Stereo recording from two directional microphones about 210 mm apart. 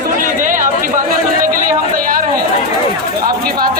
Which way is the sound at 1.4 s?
40° right (ahead or behind).